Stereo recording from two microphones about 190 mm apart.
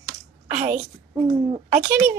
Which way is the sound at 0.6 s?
35° right (ahead or behind).